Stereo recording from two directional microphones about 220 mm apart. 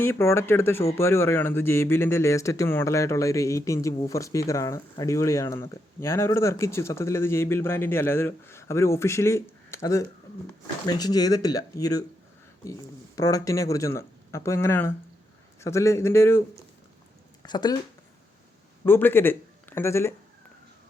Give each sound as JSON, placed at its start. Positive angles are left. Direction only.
{"t": 0.0, "sound": "speech", "side_deg": 10}
{"t": 13.1, "sound": "speech", "side_deg": 15}
{"t": 17.4, "sound": "speech", "side_deg": 20}
{"t": 18.9, "sound": "speech", "side_deg": 10}